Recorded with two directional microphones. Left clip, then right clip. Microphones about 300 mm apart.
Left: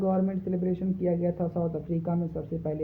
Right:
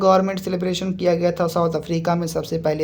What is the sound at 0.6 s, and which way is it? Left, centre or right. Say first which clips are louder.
Speech: right 9 dB; right.